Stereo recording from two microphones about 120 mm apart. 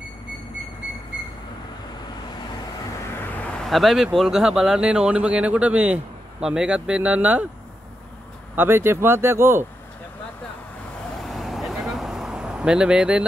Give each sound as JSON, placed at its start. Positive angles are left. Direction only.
{"t": 3.6, "sound": "speech", "side_deg": 0}
{"t": 8.5, "sound": "speech", "side_deg": -20}
{"t": 11.1, "sound": "vehicle", "side_deg": 0}